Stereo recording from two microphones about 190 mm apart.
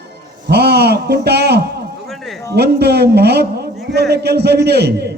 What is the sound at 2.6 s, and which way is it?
A man's voice, 60° right (ahead or behind).